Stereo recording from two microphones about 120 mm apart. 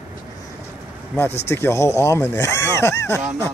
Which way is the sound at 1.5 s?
20° left (ahead or behind).